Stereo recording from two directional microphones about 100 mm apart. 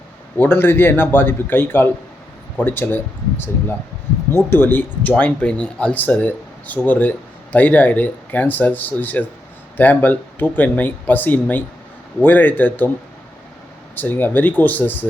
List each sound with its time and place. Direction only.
0.3 s a man's voice: 20° left (ahead or behind)
13.9 s a man's voice: 20° left (ahead or behind)